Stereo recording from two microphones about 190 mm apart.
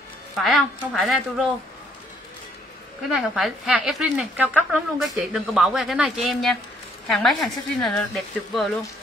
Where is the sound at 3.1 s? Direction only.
Centre (ahead or behind).